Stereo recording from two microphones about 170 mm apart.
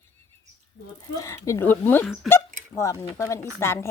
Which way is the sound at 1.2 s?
20° left (ahead or behind).